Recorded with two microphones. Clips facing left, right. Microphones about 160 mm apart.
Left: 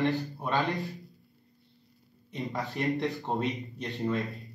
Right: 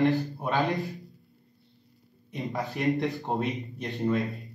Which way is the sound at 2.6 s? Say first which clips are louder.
Right 3 dB; centre (ahead or behind).